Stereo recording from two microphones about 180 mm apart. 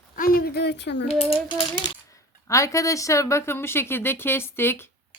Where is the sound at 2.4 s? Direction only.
15° left (ahead or behind).